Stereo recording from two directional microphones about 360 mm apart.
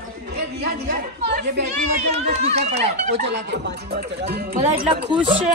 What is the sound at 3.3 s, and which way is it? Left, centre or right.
Speech, right.